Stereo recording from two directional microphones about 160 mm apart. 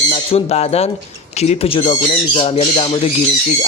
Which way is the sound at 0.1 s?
40° left (ahead or behind).